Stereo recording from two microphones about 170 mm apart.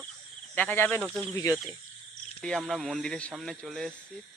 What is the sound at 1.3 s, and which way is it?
Speech, 20° left (ahead or behind).